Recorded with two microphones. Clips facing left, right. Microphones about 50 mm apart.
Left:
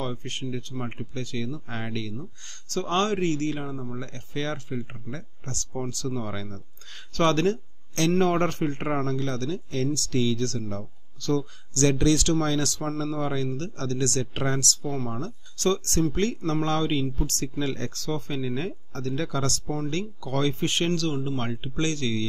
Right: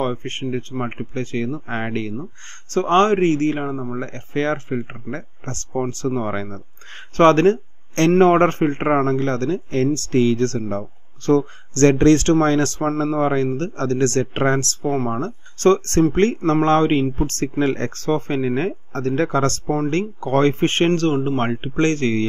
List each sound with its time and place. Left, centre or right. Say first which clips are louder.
0.0 s a man's voice: right 8 dB; right